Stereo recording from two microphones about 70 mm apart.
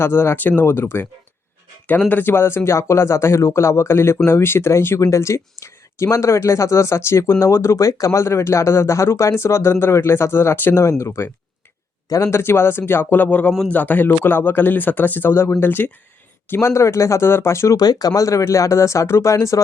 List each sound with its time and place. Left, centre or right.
0.0 s speech: left
2.0 s speech: left
4.9 s speech: left
12.0 s speech: left
12.3 s speech: left
16.6 s speech: left
17.7 s speech: left